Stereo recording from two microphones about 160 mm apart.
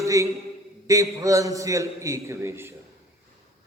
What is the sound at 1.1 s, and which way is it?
A man's voice, 20° right (ahead or behind).